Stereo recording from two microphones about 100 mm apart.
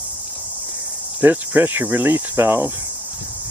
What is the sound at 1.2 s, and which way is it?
Cricket, 20° right (ahead or behind).